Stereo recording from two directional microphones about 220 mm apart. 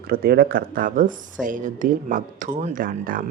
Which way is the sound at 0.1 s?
45° right (ahead or behind).